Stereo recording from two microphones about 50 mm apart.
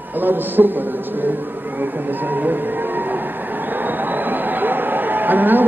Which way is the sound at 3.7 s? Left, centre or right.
Right.